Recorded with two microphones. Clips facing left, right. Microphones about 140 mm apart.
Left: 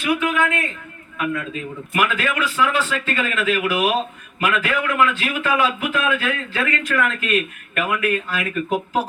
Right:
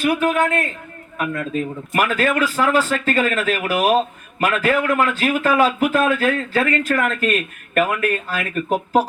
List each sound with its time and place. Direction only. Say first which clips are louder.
0.0 s a man's voice: right 3 dB; 45° right (ahead or behind)